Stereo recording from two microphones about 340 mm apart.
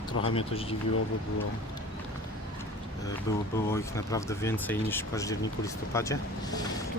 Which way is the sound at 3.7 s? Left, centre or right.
Centre.